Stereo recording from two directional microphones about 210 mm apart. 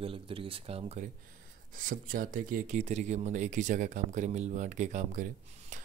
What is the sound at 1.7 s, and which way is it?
Speech, 40° right (ahead or behind).